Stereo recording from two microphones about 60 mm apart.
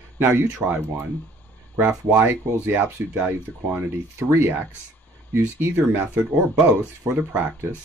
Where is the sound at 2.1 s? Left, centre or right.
Right.